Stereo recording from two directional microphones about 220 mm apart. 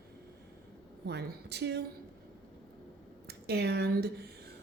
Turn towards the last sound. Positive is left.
turn(degrees=-45)  # may be behind; listen again after turning